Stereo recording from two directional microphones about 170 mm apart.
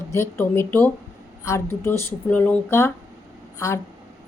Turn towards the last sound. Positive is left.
turn(degrees=15)  # may be behind; listen again after turning